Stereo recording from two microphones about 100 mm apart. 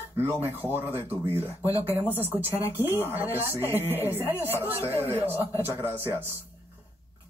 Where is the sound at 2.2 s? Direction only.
20° right (ahead or behind).